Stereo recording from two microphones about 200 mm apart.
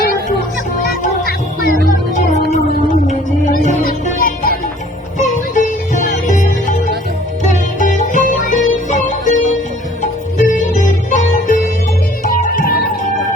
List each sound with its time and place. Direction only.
1.2 s music: 50° left (ahead or behind)